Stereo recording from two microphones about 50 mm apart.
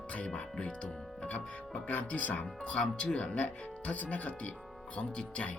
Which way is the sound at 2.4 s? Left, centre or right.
Left.